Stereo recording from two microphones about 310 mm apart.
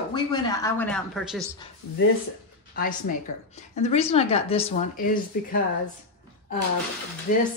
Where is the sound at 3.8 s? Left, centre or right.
Centre.